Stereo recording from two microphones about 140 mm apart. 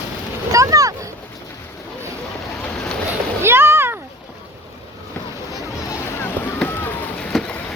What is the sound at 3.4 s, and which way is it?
Splash, 15° right (ahead or behind).